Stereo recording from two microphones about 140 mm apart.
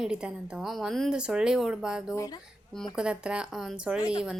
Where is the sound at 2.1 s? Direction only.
25° left (ahead or behind).